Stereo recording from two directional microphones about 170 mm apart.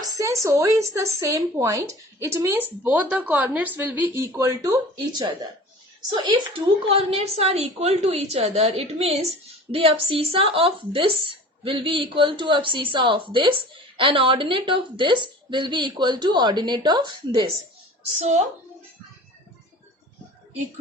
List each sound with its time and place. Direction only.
0.0 s a woman's voice: 20° right (ahead or behind)
18.2 s a woman's voice: 40° right (ahead or behind)